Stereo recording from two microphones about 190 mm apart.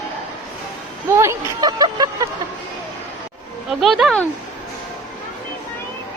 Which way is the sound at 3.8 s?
Centre (ahead or behind).